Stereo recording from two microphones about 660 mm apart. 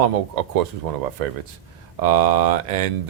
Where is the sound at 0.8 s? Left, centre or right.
Right.